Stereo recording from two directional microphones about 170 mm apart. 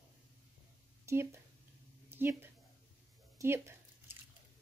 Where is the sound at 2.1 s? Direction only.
15° right (ahead or behind).